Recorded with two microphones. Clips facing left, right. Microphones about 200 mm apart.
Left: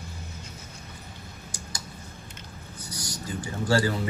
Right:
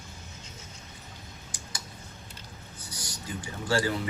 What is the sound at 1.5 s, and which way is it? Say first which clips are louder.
Tick: left 4 dB; 40° left (ahead or behind).